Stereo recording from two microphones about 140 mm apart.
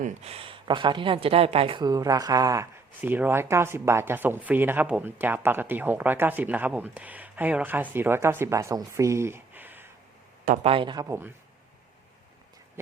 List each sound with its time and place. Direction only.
0.0 s speech: 50° right (ahead or behind)
1.8 s speech: 25° right (ahead or behind)
10.6 s speech: 40° right (ahead or behind)